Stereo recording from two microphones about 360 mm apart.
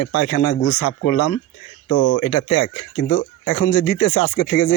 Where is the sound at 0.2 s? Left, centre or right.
Left.